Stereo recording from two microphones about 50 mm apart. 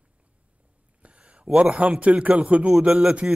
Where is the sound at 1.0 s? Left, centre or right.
Right.